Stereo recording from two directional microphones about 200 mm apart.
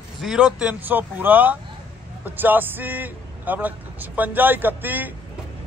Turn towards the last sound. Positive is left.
turn(degrees=-10)  # may be behind; listen again after turning